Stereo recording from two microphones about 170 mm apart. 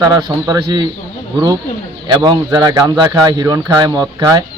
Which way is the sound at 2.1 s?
25° right (ahead or behind).